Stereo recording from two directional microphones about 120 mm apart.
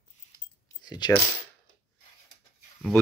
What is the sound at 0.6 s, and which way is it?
Keys jangling, 35° left (ahead or behind).